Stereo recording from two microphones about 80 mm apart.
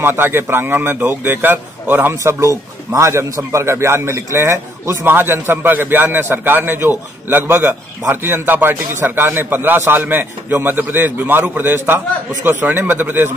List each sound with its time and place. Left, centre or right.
0.0 s speech: right
2.1 s a man's voice: right